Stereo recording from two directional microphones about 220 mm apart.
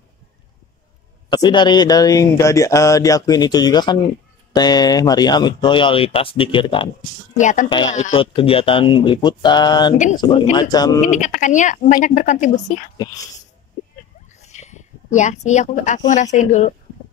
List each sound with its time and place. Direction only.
1.3 s speech: 20° left (ahead or behind)
7.3 s speech: 35° left (ahead or behind); by 11.0 s 15° left (ahead or behind)
11.0 s speech: 35° left (ahead or behind)
12.9 s speech: 15° left (ahead or behind)
14.4 s a sound: 30° left (ahead or behind)
16.1 s speech: 35° left (ahead or behind)